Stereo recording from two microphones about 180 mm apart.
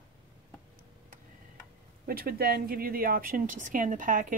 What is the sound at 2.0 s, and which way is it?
Speech, 55° right (ahead or behind).